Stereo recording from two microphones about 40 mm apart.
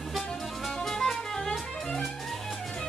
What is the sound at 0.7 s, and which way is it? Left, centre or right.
Music, centre.